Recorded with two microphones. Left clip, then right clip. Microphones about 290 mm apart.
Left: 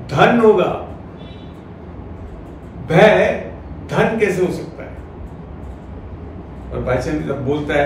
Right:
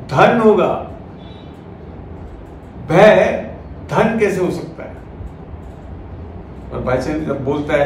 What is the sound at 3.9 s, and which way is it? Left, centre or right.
Speech, centre.